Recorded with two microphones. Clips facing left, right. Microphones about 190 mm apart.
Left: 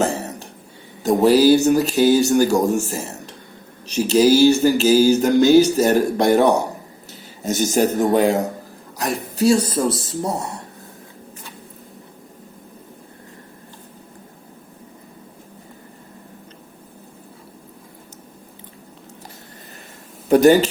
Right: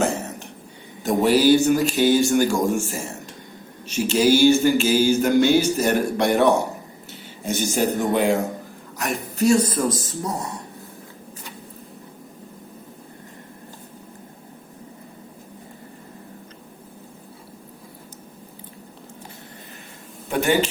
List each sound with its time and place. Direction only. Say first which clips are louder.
0.0 s a sound: left 2 dB; 35° left (ahead or behind)
7.1 s a man's voice: left 3 dB; 40° left (ahead or behind)
20.3 s speech: left 8 dB; 40° left (ahead or behind)